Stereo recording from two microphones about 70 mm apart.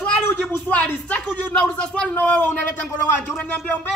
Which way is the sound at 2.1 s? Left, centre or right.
Left.